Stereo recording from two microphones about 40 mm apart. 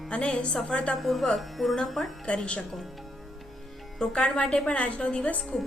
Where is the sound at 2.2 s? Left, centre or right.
Left.